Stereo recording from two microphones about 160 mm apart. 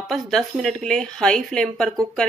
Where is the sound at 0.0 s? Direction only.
Centre (ahead or behind).